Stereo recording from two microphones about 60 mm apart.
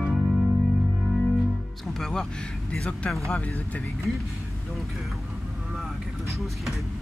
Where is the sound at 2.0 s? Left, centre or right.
Centre.